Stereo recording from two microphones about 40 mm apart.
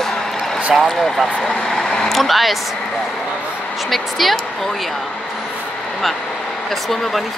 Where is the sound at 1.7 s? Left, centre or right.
Centre.